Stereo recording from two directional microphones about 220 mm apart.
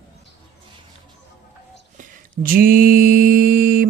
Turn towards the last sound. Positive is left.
turn(degrees=-40)  # may be behind; listen again after turning